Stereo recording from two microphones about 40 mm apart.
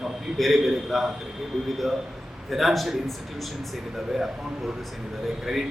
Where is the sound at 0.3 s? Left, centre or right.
Centre.